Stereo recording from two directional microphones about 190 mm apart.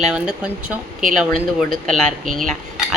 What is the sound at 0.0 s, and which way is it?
Cutlery, 5° right (ahead or behind).